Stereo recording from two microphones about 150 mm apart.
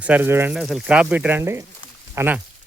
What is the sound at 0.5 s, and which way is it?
Speech, centre (ahead or behind).